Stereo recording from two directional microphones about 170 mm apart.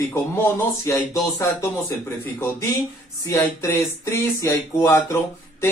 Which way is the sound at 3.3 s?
15° left (ahead or behind).